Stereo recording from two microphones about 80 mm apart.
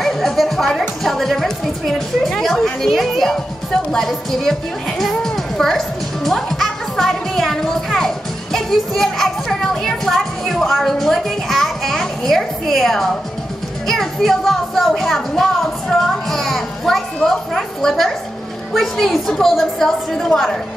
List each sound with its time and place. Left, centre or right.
0.0 s a child's voice: centre